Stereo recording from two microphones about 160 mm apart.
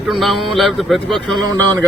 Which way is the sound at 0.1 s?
Centre (ahead or behind).